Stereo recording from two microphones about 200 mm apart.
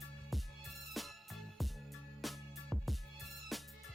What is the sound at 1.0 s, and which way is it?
Music, centre (ahead or behind).